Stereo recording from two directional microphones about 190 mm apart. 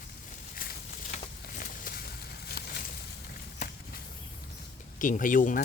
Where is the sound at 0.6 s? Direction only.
50° left (ahead or behind).